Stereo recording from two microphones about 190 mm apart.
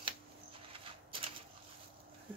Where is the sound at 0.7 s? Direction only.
30° right (ahead or behind).